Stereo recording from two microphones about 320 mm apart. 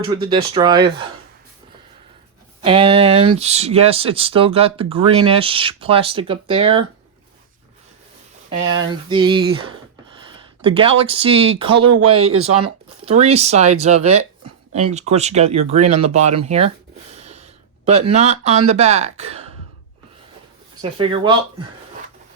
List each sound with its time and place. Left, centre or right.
0.2 s speech: centre
2.6 s speech: centre
9.0 s speech: centre
11.9 s speech: right
12.5 s speech: centre
17.2 s a sound: right
18.7 s speech: centre
21.0 s speech: centre